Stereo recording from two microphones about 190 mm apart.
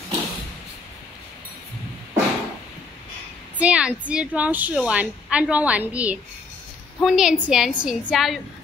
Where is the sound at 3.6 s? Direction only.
5° right (ahead or behind).